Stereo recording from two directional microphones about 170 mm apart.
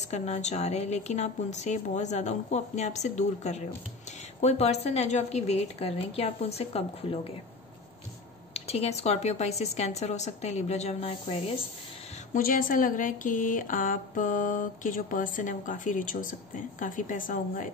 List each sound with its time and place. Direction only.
0.1 s a woman's voice: 40° left (ahead or behind)
8.5 s a woman's voice: 35° left (ahead or behind)
12.4 s speech: 55° left (ahead or behind)